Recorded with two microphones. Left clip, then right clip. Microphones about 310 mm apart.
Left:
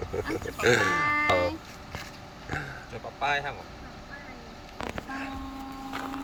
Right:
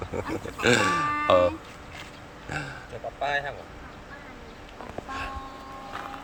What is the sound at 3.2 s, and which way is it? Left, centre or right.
Speech, right.